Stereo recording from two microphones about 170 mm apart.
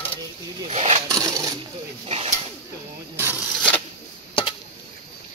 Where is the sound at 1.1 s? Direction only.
20° right (ahead or behind).